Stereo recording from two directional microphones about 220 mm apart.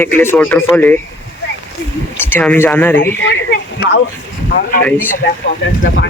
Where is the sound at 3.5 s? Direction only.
50° left (ahead or behind).